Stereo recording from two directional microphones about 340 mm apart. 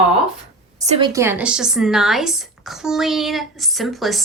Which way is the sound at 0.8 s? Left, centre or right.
Centre.